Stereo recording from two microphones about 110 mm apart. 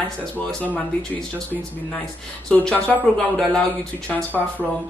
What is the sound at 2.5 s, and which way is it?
Speech, 10° left (ahead or behind).